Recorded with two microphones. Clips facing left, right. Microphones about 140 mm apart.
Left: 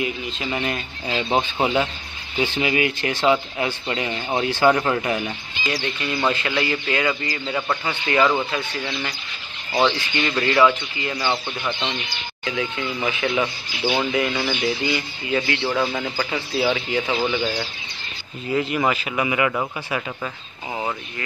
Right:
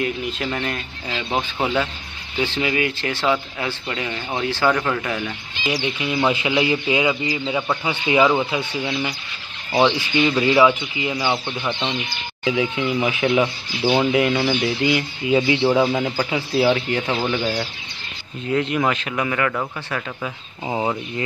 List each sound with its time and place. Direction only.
0.0 s speech: 10° left (ahead or behind)
1.0 s speech: 25° left (ahead or behind)
5.7 s speech: 10° right (ahead or behind)
12.4 s speech: 5° right (ahead or behind)
15.3 s speech: 15° right (ahead or behind)
18.5 s speech: centre (ahead or behind)